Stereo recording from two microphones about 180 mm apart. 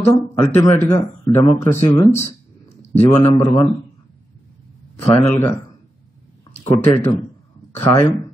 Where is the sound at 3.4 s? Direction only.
20° left (ahead or behind).